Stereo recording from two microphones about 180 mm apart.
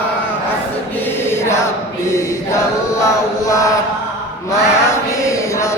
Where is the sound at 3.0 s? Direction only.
15° left (ahead or behind).